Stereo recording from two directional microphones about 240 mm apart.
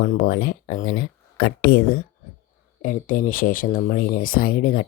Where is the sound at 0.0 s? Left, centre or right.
Left.